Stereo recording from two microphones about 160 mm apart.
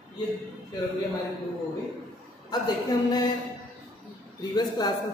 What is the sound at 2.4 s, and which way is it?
Speech, 25° left (ahead or behind).